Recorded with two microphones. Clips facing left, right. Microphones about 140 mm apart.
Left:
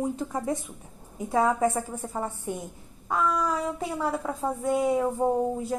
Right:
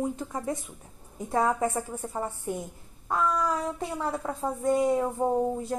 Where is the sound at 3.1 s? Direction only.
Centre (ahead or behind).